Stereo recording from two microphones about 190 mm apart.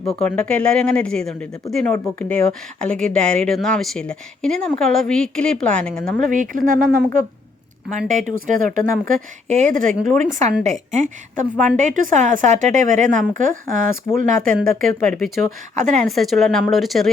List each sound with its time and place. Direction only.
0.0 s a woman's voice: 5° left (ahead or behind)
6.1 s a woman's voice: 45° right (ahead or behind)
16.0 s a woman's voice: centre (ahead or behind)